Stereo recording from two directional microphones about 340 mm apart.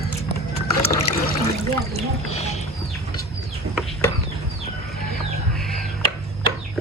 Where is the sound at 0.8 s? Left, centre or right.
Left.